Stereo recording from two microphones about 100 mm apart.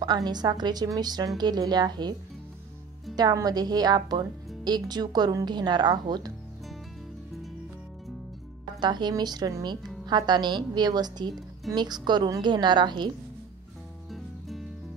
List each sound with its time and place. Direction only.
0.0 s a woman's voice: 45° right (ahead or behind)
3.2 s a woman's voice: 40° right (ahead or behind)
8.7 s a woman's voice: 45° right (ahead or behind)
14.1 s music: centre (ahead or behind)